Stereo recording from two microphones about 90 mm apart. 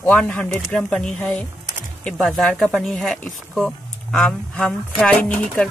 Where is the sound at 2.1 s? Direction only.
5° left (ahead or behind).